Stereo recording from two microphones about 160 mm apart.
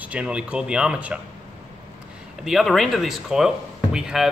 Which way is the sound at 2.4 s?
Centre (ahead or behind).